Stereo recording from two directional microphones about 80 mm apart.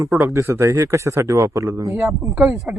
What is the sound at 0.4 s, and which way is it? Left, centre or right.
Speech, right.